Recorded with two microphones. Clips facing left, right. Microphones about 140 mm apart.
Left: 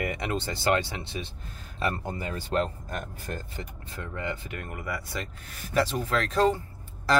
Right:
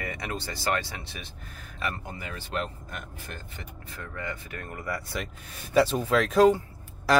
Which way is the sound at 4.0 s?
25° left (ahead or behind).